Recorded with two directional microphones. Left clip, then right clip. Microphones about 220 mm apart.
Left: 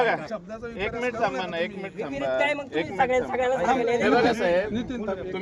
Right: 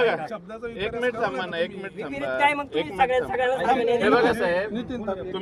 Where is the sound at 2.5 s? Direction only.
30° right (ahead or behind).